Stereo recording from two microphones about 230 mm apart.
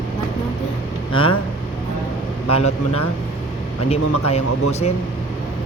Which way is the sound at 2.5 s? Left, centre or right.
Left.